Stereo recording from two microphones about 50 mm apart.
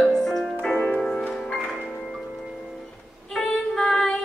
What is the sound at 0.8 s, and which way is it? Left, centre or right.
Music, centre.